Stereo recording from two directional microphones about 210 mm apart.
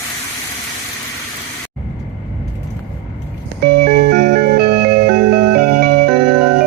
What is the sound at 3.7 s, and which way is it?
Music, 45° right (ahead or behind).